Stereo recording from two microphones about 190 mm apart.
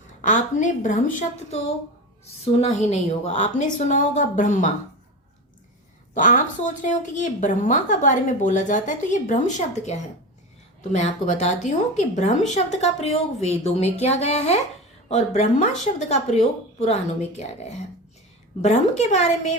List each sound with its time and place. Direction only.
0.2 s a woman's voice: 40° left (ahead or behind)
6.1 s a woman's voice: 45° left (ahead or behind)